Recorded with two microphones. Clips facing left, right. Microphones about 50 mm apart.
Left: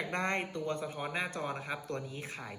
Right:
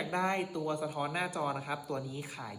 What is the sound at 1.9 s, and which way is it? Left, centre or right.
Speech, left.